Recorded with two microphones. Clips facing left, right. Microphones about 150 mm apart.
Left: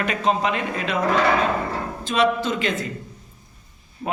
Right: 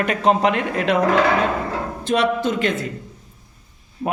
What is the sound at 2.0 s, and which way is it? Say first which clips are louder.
Speech: right 1 dB; 65° right (ahead or behind).